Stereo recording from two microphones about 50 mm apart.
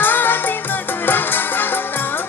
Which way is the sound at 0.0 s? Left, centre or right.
Left.